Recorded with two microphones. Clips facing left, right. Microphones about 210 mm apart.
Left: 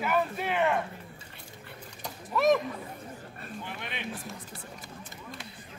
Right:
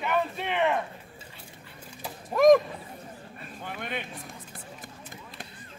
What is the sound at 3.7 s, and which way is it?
Speech, 50° right (ahead or behind).